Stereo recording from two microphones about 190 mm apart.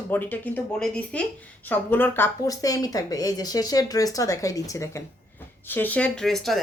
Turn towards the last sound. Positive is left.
turn(degrees=0)  # may be behind; listen again after turning